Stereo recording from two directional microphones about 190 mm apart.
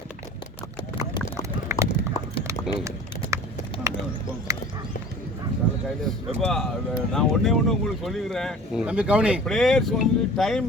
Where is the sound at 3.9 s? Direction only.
15° right (ahead or behind).